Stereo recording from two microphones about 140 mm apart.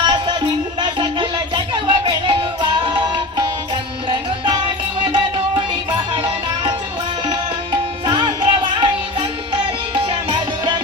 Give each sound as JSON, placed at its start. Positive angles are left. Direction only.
{"t": 0.0, "sound": "music", "side_deg": -35}